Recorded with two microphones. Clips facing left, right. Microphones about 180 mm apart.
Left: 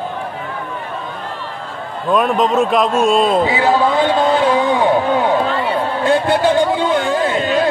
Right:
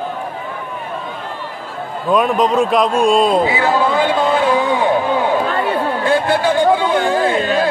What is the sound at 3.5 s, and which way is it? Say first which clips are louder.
Speech: left 1 dB; 20° left (ahead or behind).